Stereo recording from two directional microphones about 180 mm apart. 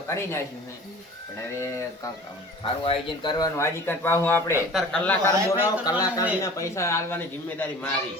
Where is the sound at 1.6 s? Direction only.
15° left (ahead or behind).